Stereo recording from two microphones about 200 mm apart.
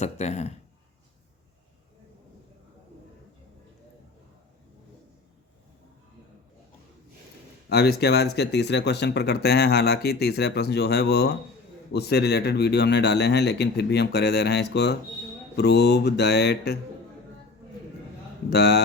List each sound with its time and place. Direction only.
0.0 s speech: 35° left (ahead or behind)
7.7 s speech: 55° left (ahead or behind)
18.5 s speech: 55° left (ahead or behind)